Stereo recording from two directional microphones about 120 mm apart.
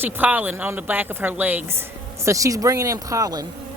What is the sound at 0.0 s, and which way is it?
A woman's voice, 15° right (ahead or behind).